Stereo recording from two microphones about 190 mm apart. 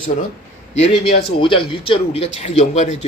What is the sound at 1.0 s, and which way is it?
Speech, 55° left (ahead or behind).